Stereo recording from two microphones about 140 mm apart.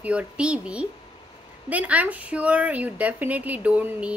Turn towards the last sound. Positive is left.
turn(degrees=-10)  # may be behind; listen again after turning